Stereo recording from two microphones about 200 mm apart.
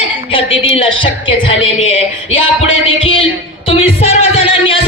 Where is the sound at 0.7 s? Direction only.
25° left (ahead or behind).